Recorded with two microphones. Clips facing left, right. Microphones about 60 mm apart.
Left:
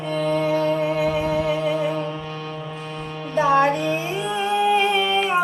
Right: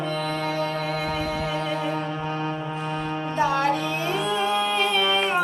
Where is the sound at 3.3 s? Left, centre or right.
Left.